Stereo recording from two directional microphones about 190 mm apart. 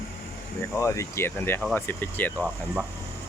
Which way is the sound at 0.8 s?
15° left (ahead or behind).